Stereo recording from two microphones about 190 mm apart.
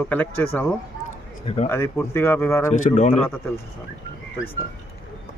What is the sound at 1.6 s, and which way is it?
Speech, 10° left (ahead or behind).